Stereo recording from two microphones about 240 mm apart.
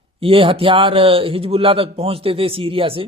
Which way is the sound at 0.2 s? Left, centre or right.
Right.